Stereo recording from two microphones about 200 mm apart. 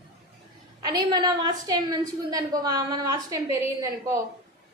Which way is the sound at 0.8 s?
20° right (ahead or behind).